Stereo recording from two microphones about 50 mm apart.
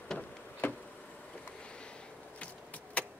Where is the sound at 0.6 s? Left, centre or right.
Left.